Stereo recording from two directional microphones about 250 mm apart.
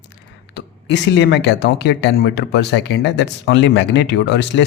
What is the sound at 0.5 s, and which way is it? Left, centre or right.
Speech, left.